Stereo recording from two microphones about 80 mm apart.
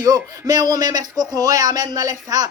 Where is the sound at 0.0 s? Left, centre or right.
Right.